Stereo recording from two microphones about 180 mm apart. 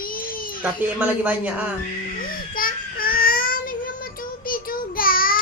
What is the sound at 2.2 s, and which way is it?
Babbling, 50° left (ahead or behind).